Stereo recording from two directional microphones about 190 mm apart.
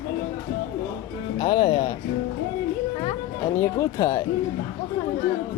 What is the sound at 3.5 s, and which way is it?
Speech, 15° left (ahead or behind).